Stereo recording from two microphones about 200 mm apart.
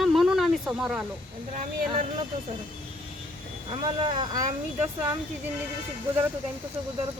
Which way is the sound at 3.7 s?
25° right (ahead or behind).